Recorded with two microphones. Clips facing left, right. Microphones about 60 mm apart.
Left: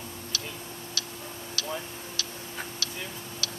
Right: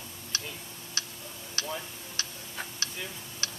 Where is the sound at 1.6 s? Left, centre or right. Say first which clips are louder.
Left 1 dB; right.